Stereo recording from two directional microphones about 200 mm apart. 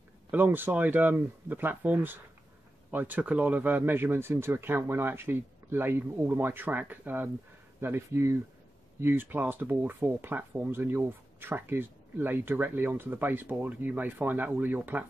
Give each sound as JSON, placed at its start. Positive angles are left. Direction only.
{"t": 0.3, "sound": "speech", "side_deg": -10}